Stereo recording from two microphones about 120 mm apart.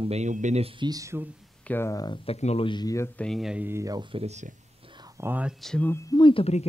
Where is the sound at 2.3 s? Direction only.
60° left (ahead or behind).